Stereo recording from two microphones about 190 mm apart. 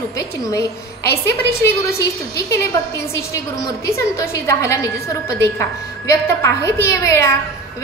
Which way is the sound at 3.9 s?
15° left (ahead or behind).